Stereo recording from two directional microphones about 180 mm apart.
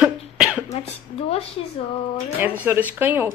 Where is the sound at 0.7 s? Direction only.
35° left (ahead or behind).